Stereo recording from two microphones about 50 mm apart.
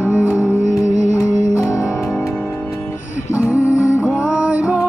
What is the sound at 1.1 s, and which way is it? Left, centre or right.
Music, left.